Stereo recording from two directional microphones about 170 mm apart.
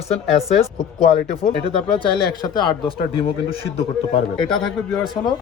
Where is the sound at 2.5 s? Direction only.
25° left (ahead or behind).